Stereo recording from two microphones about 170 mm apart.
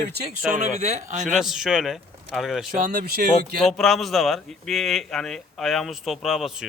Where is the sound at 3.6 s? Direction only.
Centre (ahead or behind).